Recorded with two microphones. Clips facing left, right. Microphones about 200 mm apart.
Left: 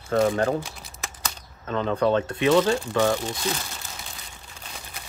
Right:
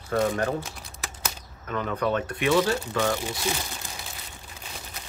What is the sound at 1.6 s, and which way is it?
Speech, 30° left (ahead or behind).